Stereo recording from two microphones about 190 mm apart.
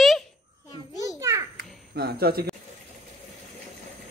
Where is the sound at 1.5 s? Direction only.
55° right (ahead or behind).